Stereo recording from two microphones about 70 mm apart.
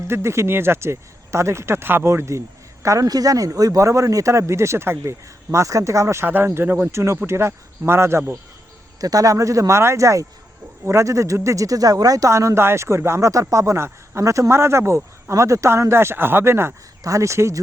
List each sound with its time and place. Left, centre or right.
0.1 s a man's voice: right
6.2 s speech: right
9.0 s a man's voice: right
12.3 s a man's voice: right
17.0 s a man's voice: right